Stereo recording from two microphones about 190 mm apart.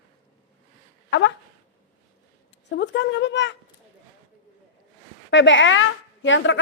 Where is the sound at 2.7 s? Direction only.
65° left (ahead or behind).